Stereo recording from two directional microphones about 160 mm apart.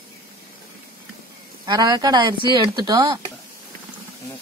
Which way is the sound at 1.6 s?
25° right (ahead or behind).